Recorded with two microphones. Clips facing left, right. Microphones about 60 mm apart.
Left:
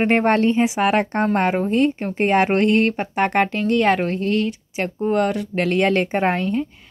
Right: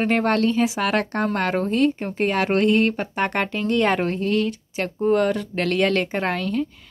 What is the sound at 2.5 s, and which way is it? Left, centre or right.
Speech, centre.